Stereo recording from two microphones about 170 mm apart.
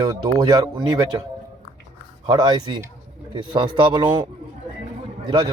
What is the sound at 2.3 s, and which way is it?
Speech, 25° right (ahead or behind).